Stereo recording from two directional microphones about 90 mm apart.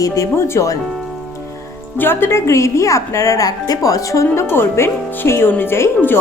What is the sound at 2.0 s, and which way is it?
A woman's voice, 25° left (ahead or behind).